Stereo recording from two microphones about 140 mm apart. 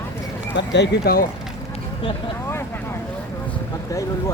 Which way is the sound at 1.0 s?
90° left.